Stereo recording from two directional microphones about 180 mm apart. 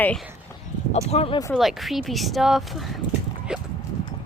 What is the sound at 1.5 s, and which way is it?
Speech, centre (ahead or behind).